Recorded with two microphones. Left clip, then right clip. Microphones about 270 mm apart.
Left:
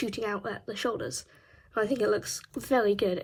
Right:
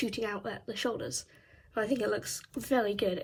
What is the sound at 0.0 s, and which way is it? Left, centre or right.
A woman's voice, centre.